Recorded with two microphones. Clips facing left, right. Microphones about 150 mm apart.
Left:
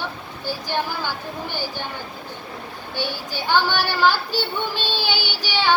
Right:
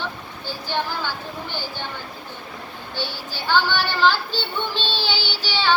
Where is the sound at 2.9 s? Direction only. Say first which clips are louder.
Left 3 dB; 15° left (ahead or behind).